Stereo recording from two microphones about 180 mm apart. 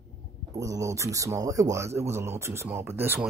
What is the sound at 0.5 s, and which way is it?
Speech, 20° right (ahead or behind).